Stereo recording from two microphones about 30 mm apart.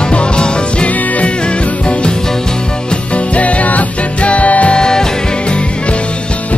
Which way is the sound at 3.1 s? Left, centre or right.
Left.